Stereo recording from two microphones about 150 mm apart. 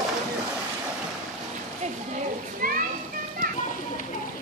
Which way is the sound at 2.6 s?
70° right (ahead or behind).